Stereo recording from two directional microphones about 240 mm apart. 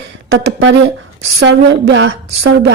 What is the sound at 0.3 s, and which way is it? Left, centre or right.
A woman's voice, right.